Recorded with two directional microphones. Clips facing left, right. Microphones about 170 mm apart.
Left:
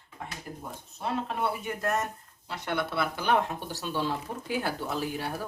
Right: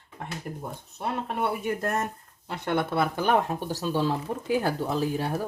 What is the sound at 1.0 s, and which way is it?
Speech, 60° right (ahead or behind).